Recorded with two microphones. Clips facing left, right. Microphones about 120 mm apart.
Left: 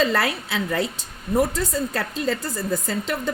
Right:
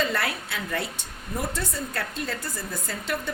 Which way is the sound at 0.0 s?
90° left.